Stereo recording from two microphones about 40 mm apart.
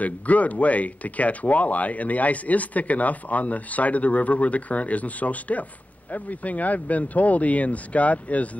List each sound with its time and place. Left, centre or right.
0.0 s speech: left